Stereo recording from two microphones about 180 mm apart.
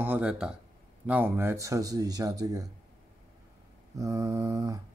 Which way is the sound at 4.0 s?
20° right (ahead or behind).